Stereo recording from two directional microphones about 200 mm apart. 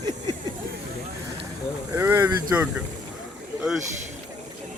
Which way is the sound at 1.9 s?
15° right (ahead or behind).